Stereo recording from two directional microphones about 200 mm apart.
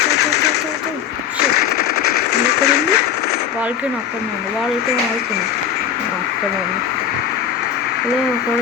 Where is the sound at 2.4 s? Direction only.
55° left (ahead or behind).